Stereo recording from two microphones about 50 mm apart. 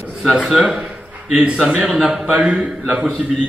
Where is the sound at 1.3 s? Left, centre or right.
Right.